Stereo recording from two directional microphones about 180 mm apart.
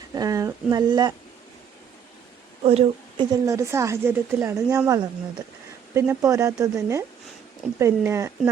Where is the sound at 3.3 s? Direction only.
15° right (ahead or behind).